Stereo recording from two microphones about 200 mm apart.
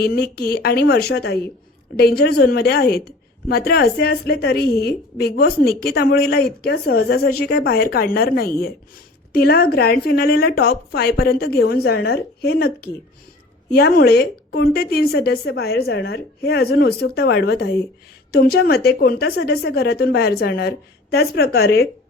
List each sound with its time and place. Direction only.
0.0 s a woman's voice: 50° left (ahead or behind)